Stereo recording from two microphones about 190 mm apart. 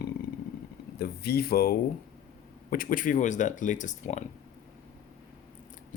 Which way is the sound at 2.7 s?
45° left (ahead or behind).